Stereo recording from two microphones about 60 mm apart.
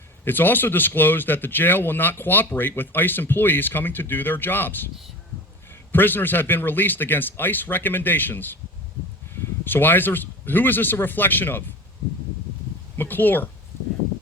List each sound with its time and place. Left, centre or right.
0.3 s speech: left
5.9 s speech: left
13.0 s speech: left